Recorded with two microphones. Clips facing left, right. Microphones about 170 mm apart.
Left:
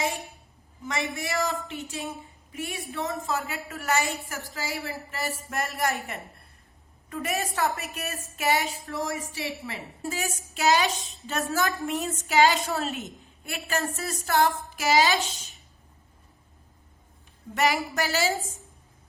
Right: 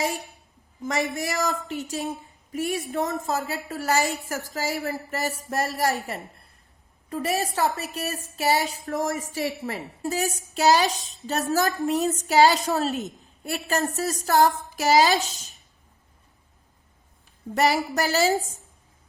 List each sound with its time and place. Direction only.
0.8 s a woman's voice: 40° right (ahead or behind)
7.1 s a woman's voice: 30° right (ahead or behind)
17.5 s a woman's voice: 40° right (ahead or behind)